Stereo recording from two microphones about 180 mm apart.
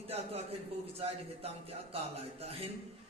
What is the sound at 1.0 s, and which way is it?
Speech, 35° right (ahead or behind).